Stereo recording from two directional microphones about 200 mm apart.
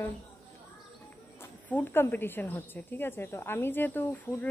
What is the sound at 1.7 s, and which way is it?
Speech, 10° left (ahead or behind).